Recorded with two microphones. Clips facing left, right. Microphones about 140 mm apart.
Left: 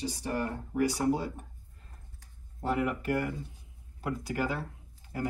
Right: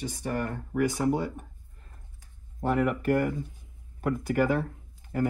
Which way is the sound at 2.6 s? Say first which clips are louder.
Right 4 dB; 55° right (ahead or behind).